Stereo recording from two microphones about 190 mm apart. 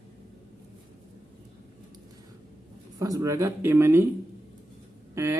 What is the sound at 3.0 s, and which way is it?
Speech, 15° right (ahead or behind).